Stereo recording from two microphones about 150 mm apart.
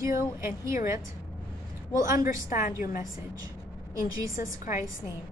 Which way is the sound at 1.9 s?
20° right (ahead or behind).